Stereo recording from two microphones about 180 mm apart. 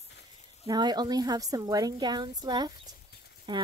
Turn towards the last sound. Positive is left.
turn(degrees=-25)  # may be behind; listen again after turning